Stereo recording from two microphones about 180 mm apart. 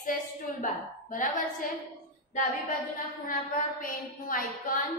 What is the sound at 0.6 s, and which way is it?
Speech, 45° left (ahead or behind).